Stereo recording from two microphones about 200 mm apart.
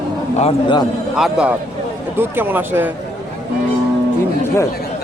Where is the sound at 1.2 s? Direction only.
5° right (ahead or behind).